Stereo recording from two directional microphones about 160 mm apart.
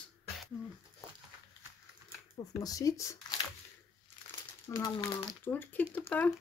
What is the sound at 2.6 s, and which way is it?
Speech, 20° left (ahead or behind).